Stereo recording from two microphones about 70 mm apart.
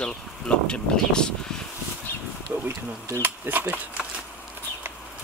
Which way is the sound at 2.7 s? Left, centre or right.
Right.